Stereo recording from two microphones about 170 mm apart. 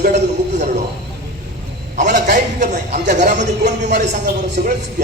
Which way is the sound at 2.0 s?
50° right (ahead or behind).